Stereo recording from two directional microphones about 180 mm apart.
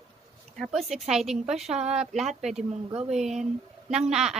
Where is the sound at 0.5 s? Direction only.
Centre (ahead or behind).